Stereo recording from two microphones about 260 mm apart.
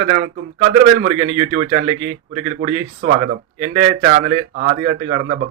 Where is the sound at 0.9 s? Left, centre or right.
Right.